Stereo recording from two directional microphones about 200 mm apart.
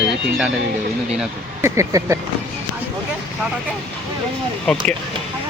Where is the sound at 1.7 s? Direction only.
15° right (ahead or behind).